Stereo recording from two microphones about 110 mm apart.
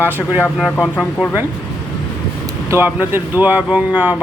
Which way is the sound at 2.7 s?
20° right (ahead or behind).